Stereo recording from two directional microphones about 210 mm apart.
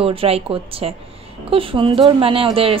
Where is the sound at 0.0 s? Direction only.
25° right (ahead or behind).